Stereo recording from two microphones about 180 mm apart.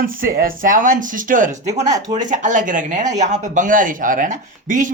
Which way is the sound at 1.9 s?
20° right (ahead or behind).